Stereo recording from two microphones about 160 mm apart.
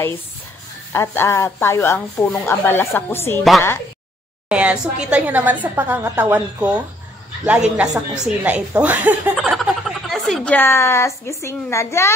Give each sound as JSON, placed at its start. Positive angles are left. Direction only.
{"t": 0.9, "sound": "a woman's voice", "side_deg": 15}
{"t": 4.5, "sound": "a woman's voice", "side_deg": -10}